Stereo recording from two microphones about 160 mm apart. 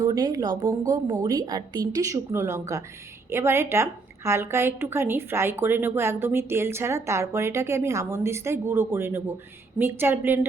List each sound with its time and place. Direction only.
0.0 s a woman's voice: 25° right (ahead or behind)